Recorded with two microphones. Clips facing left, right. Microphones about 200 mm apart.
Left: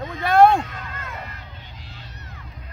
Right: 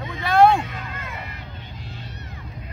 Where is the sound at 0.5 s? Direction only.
10° right (ahead or behind).